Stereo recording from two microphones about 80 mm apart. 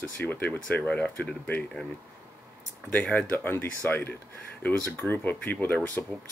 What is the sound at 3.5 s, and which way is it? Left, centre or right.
Speech, left.